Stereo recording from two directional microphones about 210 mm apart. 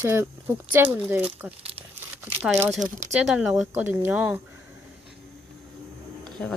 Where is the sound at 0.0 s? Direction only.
10° right (ahead or behind).